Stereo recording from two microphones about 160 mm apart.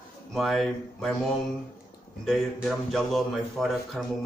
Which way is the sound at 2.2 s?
5° left (ahead or behind).